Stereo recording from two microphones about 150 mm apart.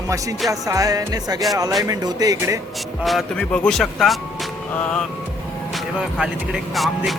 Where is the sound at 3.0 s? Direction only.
Centre (ahead or behind).